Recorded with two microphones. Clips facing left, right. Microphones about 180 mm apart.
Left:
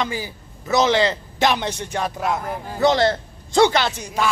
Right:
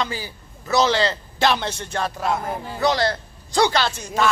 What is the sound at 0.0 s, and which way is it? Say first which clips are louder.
A man's voice: left 2 dB; 20° left (ahead or behind).